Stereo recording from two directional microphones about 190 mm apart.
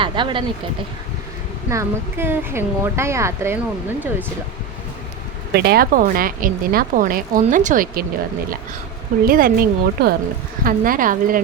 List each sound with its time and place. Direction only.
0.0 s speech: 25° right (ahead or behind)
1.7 s speech: 15° right (ahead or behind)
5.5 s speech: 55° right (ahead or behind)
9.2 s speech: 50° right (ahead or behind)